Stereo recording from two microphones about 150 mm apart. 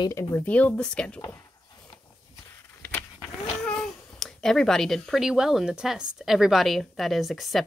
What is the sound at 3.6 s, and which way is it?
Speech, 5° left (ahead or behind).